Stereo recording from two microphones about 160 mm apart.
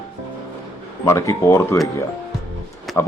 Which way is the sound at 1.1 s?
20° left (ahead or behind).